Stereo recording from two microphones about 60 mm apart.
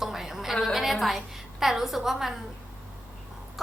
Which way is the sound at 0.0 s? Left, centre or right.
Centre.